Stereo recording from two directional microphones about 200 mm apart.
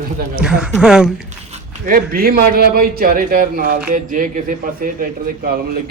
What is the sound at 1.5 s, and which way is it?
Speech, 45° right (ahead or behind).